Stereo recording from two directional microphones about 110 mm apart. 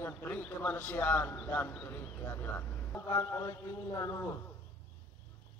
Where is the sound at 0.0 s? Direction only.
15° left (ahead or behind).